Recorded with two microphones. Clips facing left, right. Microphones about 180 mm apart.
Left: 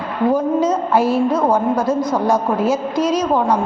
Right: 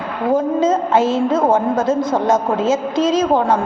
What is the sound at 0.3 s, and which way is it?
A woman's voice, 25° right (ahead or behind).